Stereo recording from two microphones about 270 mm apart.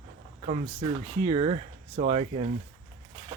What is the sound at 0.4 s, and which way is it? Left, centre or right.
Speech, right.